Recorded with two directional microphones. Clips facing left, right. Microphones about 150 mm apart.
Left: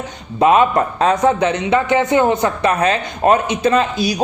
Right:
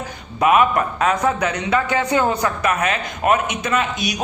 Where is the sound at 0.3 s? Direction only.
25° left (ahead or behind).